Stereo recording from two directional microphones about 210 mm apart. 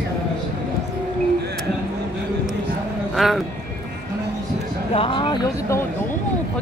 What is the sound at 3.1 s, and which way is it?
Speech, centre (ahead or behind).